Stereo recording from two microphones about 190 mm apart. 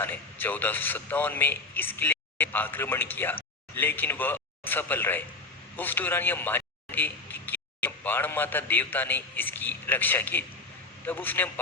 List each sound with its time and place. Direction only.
0.0 s a man's voice: 10° left (ahead or behind)